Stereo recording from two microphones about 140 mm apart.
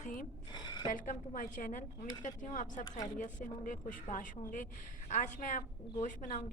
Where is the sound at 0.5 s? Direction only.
30° left (ahead or behind).